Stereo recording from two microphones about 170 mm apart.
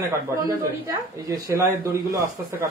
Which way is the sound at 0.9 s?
20° right (ahead or behind).